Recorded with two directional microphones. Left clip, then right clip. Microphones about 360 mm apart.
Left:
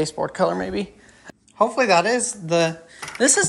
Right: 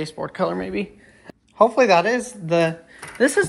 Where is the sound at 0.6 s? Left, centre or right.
Left.